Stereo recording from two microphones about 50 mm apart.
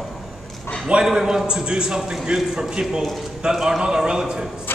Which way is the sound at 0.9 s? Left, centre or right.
Centre.